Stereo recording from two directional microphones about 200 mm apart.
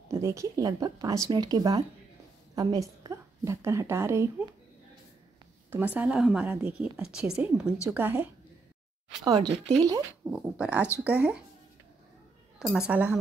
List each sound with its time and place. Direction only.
0.1 s a woman's voice: 15° right (ahead or behind)
5.7 s a woman's voice: 10° right (ahead or behind)
9.2 s speech: 20° right (ahead or behind)
10.3 s a woman's voice: 5° right (ahead or behind)
12.7 s a woman's voice: 5° right (ahead or behind)